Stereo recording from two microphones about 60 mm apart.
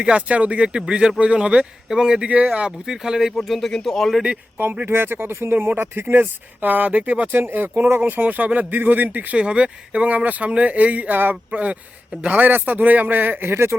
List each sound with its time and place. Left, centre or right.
0.0 s speech: centre
3.3 s speech: centre
4.9 s speech: right
7.3 s a man's voice: right
9.4 s a man's voice: centre
11.5 s a man's voice: right